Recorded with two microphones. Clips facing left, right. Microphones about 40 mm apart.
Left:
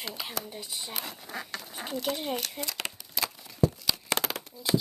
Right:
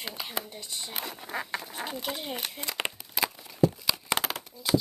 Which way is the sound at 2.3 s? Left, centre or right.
Right.